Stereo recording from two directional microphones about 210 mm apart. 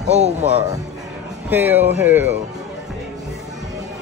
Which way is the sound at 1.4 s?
10° right (ahead or behind).